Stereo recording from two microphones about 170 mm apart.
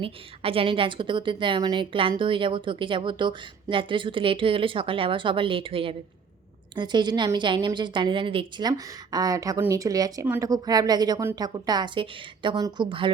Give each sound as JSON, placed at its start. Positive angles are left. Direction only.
{"t": 0.0, "sound": "a woman's voice", "side_deg": -30}